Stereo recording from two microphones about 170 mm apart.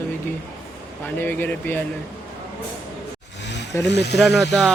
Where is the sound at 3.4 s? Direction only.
90° left.